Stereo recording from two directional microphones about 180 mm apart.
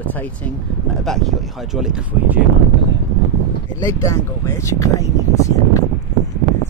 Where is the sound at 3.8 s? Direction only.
15° left (ahead or behind).